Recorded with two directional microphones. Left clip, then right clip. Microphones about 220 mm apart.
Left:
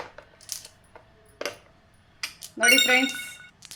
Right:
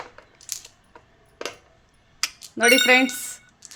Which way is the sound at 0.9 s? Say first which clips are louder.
Even; 5° right (ahead or behind).